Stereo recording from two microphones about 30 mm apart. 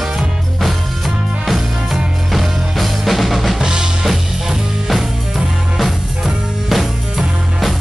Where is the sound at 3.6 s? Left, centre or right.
Right.